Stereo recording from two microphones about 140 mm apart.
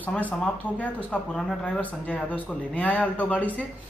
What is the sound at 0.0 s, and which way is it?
Speech, 10° left (ahead or behind).